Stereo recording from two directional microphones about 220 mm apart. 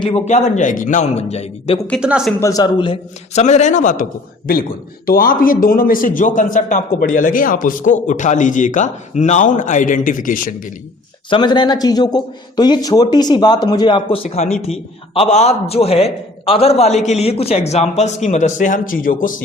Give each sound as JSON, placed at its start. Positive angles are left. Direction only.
{"t": 0.0, "sound": "a man's voice", "side_deg": 25}
{"t": 1.9, "sound": "a woman's voice", "side_deg": -5}
{"t": 2.4, "sound": "a man's voice", "side_deg": 15}
{"t": 5.0, "sound": "a man's voice", "side_deg": 40}
{"t": 11.3, "sound": "a man's voice", "side_deg": 20}